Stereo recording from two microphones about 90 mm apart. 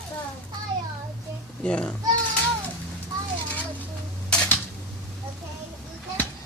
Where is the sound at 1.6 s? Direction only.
10° left (ahead or behind).